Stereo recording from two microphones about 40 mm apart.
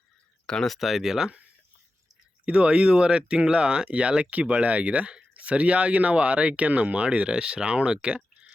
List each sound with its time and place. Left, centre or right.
0.4 s speech: centre
0.7 s speech: centre
2.4 s speech: right